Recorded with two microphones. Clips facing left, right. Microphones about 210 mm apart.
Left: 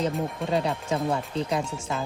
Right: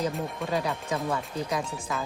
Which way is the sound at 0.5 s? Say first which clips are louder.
Left 3 dB; 30° left (ahead or behind).